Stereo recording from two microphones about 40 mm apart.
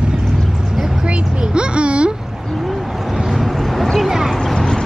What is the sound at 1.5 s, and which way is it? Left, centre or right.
Speech, right.